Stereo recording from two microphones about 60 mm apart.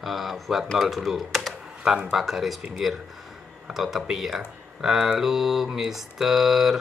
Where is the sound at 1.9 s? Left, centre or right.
Centre.